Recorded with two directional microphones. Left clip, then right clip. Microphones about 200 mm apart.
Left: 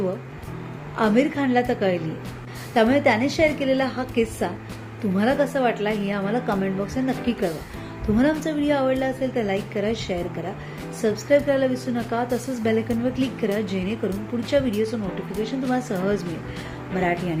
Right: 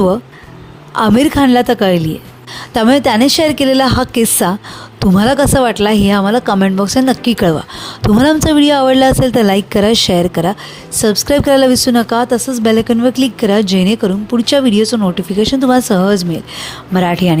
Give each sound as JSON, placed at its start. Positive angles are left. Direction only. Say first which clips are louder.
{"t": 0.9, "sound": "speech", "louder": "right 10 dB", "side_deg": -55}